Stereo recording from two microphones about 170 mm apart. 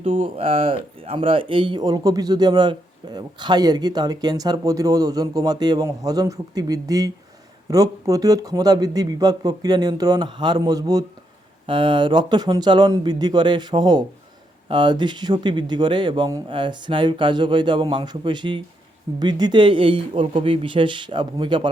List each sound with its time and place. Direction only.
0.0 s speech: 35° right (ahead or behind)